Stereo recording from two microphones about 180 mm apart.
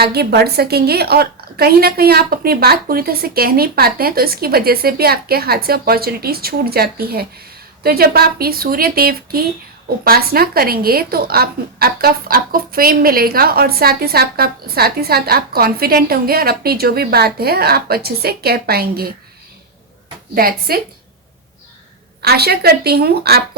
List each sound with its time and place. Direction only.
0.0 s speech: 60° right (ahead or behind)
20.3 s speech: 55° right (ahead or behind)
22.2 s speech: 60° right (ahead or behind)